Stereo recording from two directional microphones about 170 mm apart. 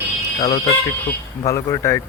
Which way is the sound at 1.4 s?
15° left (ahead or behind).